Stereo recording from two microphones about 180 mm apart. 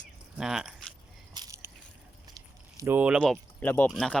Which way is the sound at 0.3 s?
5° right (ahead or behind).